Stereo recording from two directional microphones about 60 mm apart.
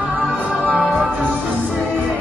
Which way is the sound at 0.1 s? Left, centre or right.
Right.